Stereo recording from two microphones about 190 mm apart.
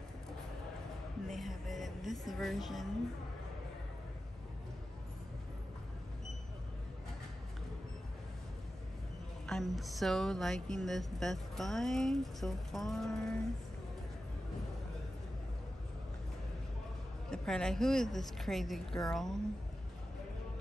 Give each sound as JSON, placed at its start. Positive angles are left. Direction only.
{"t": 1.3, "sound": "music", "side_deg": 0}
{"t": 9.5, "sound": "speech", "side_deg": 0}
{"t": 17.3, "sound": "speech", "side_deg": 5}